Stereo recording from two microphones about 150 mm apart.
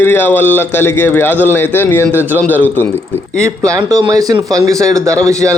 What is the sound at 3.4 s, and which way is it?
Speech, 20° right (ahead or behind).